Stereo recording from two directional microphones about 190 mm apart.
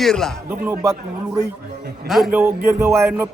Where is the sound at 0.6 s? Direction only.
15° right (ahead or behind).